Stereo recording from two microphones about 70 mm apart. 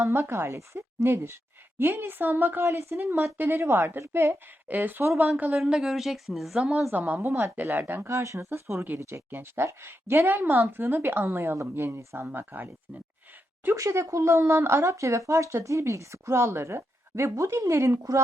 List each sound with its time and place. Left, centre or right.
0.0 s a woman's voice: right
2.6 s a woman's voice: right
5.5 s speech: centre
6.9 s a woman's voice: right
7.2 s speech: right
7.5 s a woman's voice: right
8.0 s speech: right
13.7 s speech: right